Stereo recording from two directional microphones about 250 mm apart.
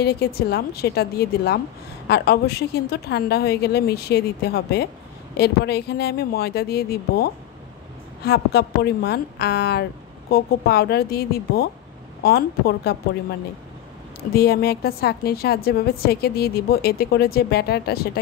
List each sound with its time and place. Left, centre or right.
0.0 s a woman's voice: left
14.3 s a woman's voice: left